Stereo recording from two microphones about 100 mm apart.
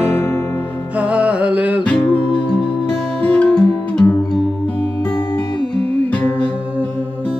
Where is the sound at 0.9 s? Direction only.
15° right (ahead or behind).